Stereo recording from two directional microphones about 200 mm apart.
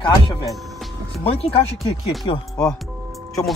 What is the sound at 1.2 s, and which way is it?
Speech, 30° left (ahead or behind).